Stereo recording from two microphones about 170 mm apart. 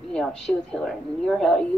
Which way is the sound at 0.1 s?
5° left (ahead or behind).